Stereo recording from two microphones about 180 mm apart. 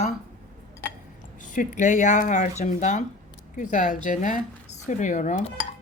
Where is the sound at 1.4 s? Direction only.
45° left (ahead or behind).